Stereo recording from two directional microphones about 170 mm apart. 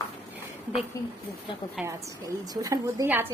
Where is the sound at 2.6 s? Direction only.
20° right (ahead or behind).